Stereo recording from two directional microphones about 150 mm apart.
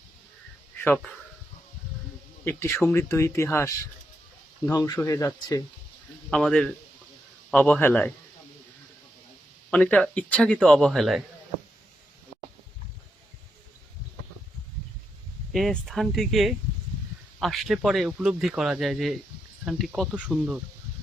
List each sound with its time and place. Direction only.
2.4 s speech: 15° left (ahead or behind)
6.3 s speech: 5° left (ahead or behind)
9.6 s speech: 10° left (ahead or behind)
15.5 s speech: centre (ahead or behind)